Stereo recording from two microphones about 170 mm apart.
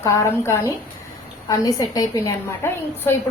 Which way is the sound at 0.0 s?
20° left (ahead or behind).